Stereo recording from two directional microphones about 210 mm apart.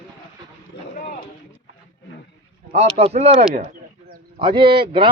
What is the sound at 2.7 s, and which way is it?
Speech, 30° right (ahead or behind).